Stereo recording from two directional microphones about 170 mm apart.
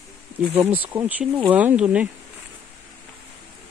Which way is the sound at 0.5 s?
10° right (ahead or behind).